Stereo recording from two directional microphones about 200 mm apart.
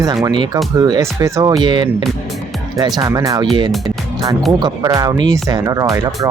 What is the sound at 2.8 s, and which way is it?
Speech, 20° right (ahead or behind).